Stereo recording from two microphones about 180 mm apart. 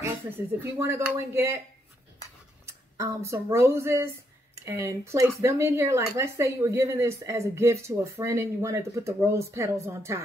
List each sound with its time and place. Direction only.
0.7 s speech: 15° right (ahead or behind)
2.6 s speech: 15° right (ahead or behind)